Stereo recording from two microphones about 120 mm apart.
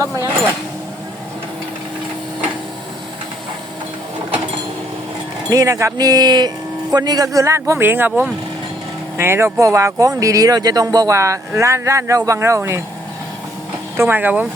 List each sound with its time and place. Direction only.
5.5 s speech: 30° right (ahead or behind)
13.9 s speech: 20° right (ahead or behind)